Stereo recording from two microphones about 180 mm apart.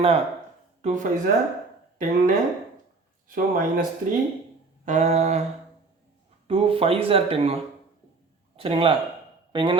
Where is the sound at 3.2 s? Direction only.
50° right (ahead or behind).